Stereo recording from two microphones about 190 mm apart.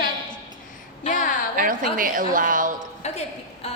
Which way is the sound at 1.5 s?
45° right (ahead or behind).